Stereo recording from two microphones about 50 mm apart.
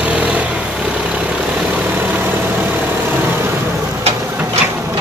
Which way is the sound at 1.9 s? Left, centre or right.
Right.